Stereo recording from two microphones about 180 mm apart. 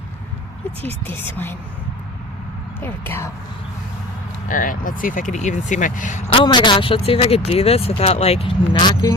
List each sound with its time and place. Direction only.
1.0 s speech: 10° left (ahead or behind)
2.8 s speech: 10° left (ahead or behind)
4.4 s speech: 50° left (ahead or behind)
6.3 s speech: 25° left (ahead or behind)